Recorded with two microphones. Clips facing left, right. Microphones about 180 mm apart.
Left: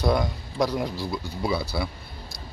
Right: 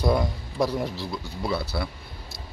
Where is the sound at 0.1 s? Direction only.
5° right (ahead or behind).